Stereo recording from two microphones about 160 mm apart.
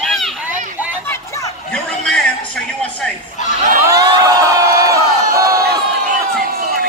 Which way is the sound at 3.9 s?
25° right (ahead or behind).